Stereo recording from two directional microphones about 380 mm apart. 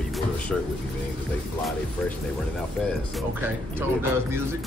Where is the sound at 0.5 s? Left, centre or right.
Centre.